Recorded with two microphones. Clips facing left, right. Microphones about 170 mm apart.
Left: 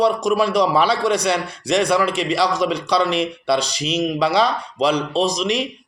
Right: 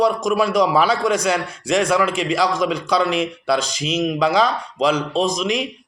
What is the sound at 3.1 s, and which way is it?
Speech, 45° right (ahead or behind).